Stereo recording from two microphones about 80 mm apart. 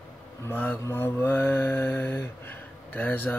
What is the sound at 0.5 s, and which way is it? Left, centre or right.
Mantra, centre.